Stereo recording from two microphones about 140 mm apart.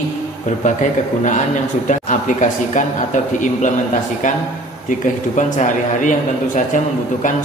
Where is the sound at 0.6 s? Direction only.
65° left (ahead or behind).